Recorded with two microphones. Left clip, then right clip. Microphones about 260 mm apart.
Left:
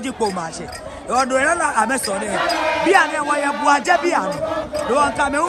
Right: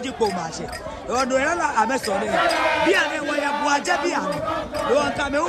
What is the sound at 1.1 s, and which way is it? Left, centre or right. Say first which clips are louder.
Speech: left 4 dB; left.